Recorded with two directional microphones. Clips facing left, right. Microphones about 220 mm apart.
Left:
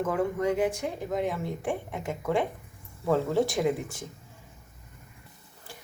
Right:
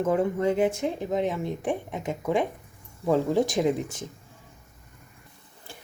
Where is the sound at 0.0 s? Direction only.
25° right (ahead or behind).